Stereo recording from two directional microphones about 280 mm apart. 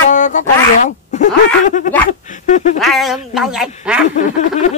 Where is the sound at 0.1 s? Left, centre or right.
Left.